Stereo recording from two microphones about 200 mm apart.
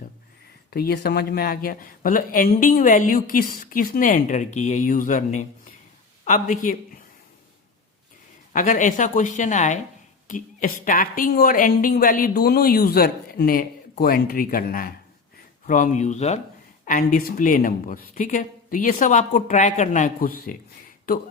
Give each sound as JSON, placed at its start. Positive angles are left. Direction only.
{"t": 0.7, "sound": "speech", "side_deg": 50}
{"t": 8.5, "sound": "speech", "side_deg": 40}